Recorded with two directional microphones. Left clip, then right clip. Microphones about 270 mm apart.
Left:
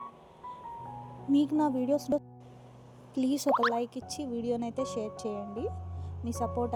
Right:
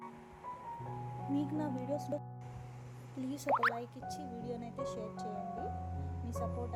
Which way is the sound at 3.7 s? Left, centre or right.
Left.